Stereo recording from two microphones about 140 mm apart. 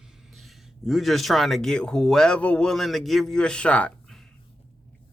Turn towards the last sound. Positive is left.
turn(degrees=10)  # may be behind; listen again after turning